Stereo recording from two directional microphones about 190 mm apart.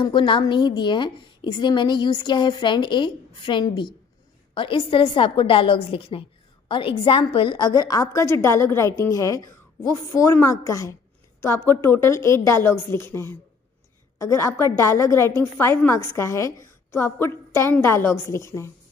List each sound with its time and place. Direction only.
0.0 s a woman's voice: 25° left (ahead or behind)